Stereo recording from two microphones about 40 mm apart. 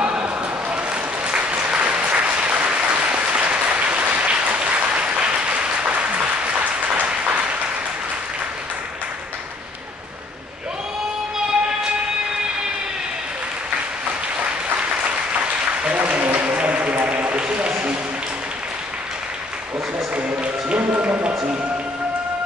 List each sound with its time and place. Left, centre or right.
1.2 s applause: right
14.4 s applause: right
15.9 s a sound: right
20.2 s music: right